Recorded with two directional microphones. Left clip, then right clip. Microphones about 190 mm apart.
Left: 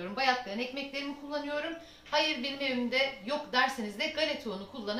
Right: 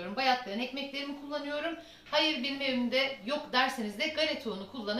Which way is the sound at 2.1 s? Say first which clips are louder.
Right 1 dB; 15° left (ahead or behind).